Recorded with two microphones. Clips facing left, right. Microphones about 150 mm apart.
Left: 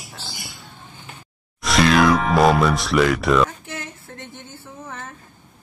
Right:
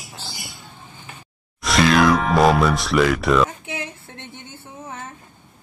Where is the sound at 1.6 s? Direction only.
Centre (ahead or behind).